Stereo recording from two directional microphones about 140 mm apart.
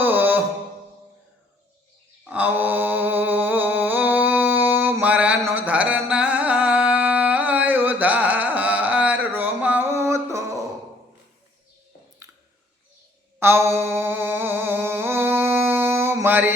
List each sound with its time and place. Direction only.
0.0 s music: 15° right (ahead or behind)
2.2 s mantra: 10° right (ahead or behind)
13.4 s a sound: 20° right (ahead or behind)